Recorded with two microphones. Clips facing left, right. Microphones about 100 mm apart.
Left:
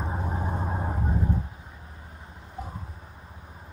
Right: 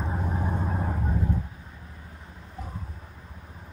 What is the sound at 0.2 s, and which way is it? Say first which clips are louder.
Vehicle: right 1 dB; 10° left (ahead or behind).